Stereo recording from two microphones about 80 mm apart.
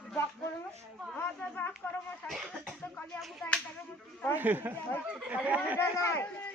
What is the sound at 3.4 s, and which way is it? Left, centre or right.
Clapping, centre.